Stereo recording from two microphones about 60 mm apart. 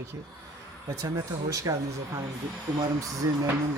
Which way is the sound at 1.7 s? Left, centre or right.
Right.